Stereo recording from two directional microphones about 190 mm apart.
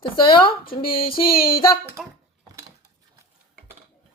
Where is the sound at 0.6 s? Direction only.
50° left (ahead or behind).